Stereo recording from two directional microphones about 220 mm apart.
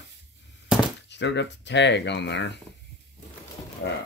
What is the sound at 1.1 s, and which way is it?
Speech, 55° left (ahead or behind).